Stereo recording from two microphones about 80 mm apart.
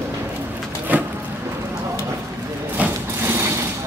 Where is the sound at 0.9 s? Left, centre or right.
Right.